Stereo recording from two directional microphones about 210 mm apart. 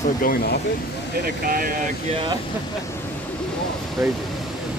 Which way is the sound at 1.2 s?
45° right (ahead or behind).